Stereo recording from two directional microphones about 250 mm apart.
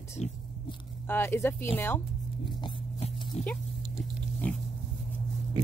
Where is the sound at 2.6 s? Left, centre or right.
Left.